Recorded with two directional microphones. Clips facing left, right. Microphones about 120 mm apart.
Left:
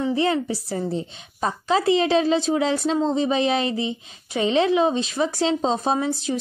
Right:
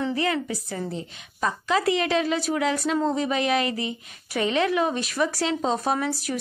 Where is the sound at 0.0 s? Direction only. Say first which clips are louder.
Left 4 dB; 25° left (ahead or behind).